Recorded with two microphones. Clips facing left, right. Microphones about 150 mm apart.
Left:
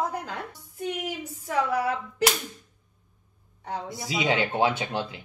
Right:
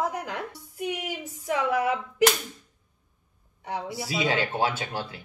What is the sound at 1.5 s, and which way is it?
Speech, 15° right (ahead or behind).